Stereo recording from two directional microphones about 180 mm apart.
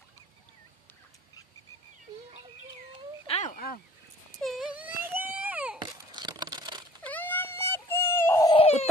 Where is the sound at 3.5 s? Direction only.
55° left (ahead or behind).